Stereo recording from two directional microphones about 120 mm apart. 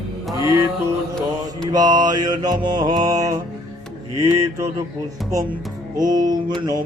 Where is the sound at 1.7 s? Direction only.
35° right (ahead or behind).